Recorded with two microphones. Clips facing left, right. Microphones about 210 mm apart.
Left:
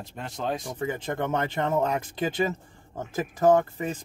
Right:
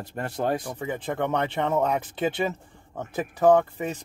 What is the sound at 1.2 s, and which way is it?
Speech, centre (ahead or behind).